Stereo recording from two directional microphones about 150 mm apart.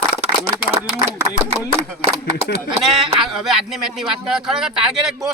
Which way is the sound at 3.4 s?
Centre (ahead or behind).